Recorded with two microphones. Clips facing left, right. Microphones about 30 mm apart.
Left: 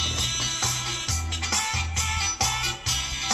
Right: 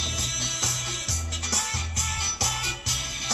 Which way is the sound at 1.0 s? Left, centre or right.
Left.